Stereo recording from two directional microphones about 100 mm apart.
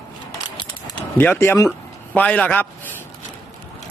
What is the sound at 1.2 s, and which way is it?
Speech, 20° left (ahead or behind).